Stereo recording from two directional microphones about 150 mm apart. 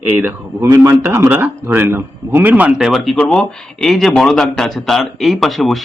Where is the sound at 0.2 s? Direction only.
15° right (ahead or behind).